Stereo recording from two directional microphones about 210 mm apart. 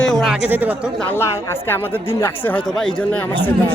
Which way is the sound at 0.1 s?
Centre (ahead or behind).